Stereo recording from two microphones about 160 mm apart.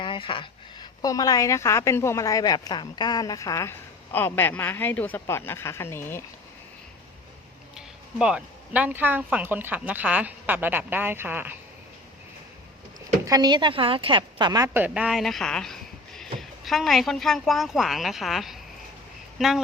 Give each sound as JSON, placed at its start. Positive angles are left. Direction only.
{"t": 0.0, "sound": "a woman's voice", "side_deg": 30}
{"t": 7.8, "sound": "speech", "side_deg": -5}
{"t": 13.2, "sound": "a woman's voice", "side_deg": -25}